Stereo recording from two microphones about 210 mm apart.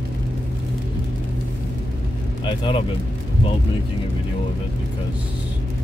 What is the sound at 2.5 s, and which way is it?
Speech, 25° left (ahead or behind).